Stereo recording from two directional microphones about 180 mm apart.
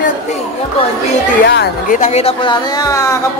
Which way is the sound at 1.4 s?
70° left (ahead or behind).